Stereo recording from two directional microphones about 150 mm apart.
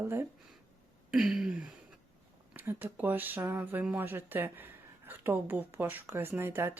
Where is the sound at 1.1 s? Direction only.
5° right (ahead or behind).